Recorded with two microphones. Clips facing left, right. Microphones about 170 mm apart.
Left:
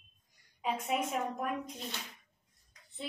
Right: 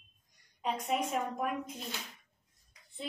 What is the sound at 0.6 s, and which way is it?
A woman's voice, 5° left (ahead or behind).